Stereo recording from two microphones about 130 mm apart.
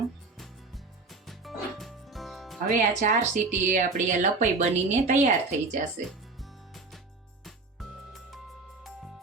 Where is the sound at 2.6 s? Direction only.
70° right (ahead or behind).